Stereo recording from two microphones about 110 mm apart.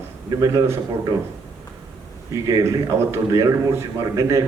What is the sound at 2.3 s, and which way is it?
A man's voice, 30° right (ahead or behind).